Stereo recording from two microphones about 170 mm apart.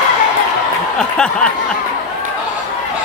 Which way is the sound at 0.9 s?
5° left (ahead or behind).